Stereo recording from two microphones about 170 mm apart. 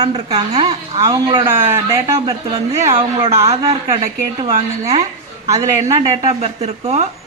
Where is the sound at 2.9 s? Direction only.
35° right (ahead or behind).